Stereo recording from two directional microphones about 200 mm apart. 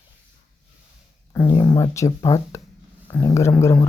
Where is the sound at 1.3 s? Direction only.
15° left (ahead or behind).